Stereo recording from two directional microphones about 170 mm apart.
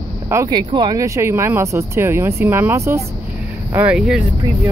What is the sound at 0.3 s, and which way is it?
Speech, 20° right (ahead or behind).